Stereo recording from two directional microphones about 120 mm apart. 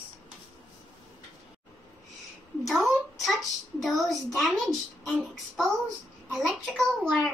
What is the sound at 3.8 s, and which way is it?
A child's voice, centre (ahead or behind).